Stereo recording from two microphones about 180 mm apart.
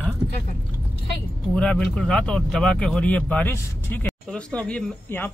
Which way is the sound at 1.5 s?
5° left (ahead or behind).